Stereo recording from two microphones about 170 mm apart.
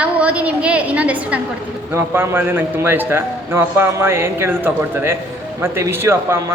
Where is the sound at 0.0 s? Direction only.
10° right (ahead or behind).